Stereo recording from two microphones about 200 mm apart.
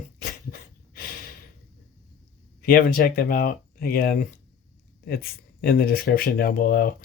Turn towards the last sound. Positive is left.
turn(degrees=45)  # may be behind; listen again after turning